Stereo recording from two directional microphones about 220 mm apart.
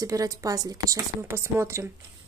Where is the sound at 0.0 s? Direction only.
15° right (ahead or behind).